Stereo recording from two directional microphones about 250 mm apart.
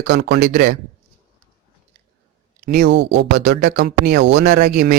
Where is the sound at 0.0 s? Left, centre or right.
Right.